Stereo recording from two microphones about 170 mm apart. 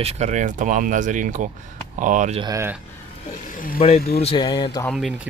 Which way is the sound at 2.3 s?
20° right (ahead or behind).